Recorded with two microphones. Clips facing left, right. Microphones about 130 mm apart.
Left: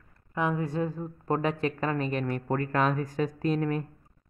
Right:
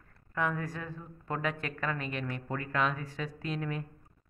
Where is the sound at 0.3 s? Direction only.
20° left (ahead or behind); by 3.8 s 45° left (ahead or behind).